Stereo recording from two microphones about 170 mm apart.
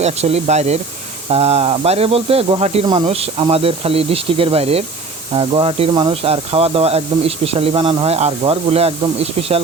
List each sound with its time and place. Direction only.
0.0 s speech: 40° right (ahead or behind)